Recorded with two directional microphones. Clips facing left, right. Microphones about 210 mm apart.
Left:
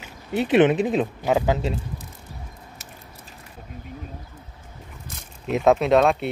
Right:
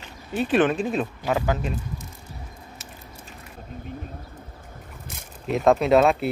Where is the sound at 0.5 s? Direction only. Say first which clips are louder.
Left 4 dB; 20° left (ahead or behind).